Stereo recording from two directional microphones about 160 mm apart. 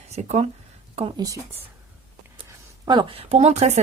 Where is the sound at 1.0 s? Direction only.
30° right (ahead or behind).